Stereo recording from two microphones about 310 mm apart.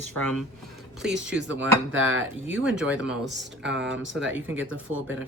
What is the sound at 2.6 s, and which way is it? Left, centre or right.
Speech, centre.